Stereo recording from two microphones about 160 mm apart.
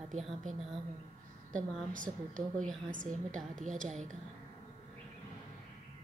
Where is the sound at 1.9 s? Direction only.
55° right (ahead or behind).